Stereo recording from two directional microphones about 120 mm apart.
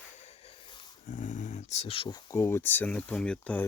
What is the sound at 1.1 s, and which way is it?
Dog, 90° left.